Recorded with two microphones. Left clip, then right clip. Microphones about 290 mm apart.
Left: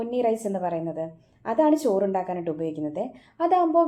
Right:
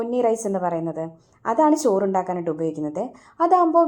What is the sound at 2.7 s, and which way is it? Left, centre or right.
A woman's voice, centre.